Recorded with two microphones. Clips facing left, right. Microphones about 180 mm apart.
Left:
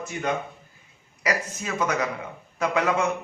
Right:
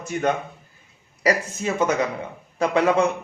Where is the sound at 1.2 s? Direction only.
25° right (ahead or behind).